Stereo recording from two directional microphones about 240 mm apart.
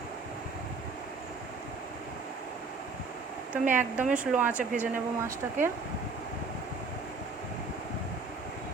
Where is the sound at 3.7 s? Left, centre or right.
Centre.